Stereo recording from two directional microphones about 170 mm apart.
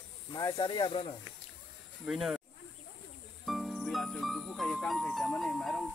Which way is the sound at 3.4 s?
Centre (ahead or behind).